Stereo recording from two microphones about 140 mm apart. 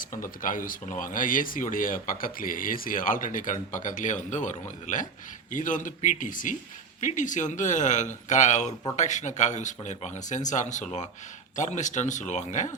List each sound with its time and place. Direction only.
0.0 s speech: 75° left (ahead or behind)